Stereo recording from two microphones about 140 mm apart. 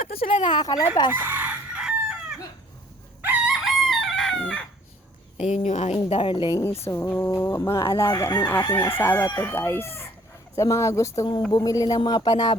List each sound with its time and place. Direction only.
0.2 s speech: 40° left (ahead or behind)
1.1 s chicken: 15° right (ahead or behind)
3.2 s crowing: 10° right (ahead or behind)
3.6 s chicken: centre (ahead or behind)
5.4 s a woman's voice: 50° left (ahead or behind)
6.1 s speech: 40° left (ahead or behind)